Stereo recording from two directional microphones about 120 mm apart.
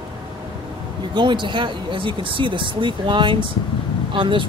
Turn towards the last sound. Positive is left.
turn(degrees=-45)  # may be behind; listen again after turning